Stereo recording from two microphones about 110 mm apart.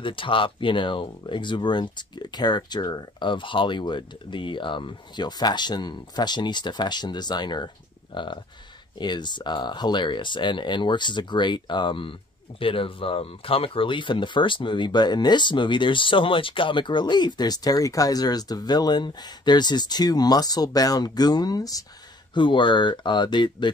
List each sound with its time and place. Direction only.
0.0 s speech: 50° left (ahead or behind); by 21.8 s 35° left (ahead or behind)
22.3 s speech: 50° left (ahead or behind)